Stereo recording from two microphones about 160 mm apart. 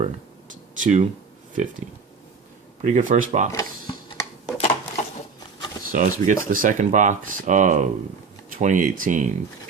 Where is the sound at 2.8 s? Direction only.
50° right (ahead or behind).